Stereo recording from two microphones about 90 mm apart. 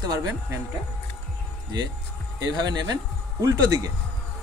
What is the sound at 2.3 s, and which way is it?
Speech, 45° right (ahead or behind).